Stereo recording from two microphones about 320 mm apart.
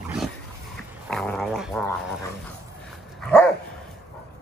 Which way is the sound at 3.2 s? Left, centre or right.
Centre.